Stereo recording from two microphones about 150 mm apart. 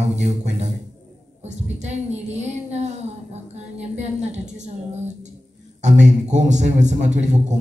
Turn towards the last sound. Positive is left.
turn(degrees=-50)  # may be behind; listen again after turning